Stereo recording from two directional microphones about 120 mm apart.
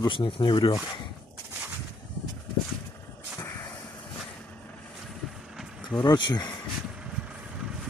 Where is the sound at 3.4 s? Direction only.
20° left (ahead or behind).